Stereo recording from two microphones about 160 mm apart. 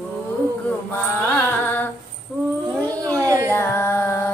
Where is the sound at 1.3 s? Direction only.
10° left (ahead or behind).